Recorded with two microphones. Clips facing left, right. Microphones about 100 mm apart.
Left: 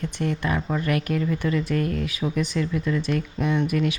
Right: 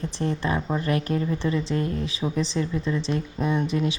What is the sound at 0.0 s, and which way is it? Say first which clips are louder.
Speech: even; 30° right (ahead or behind).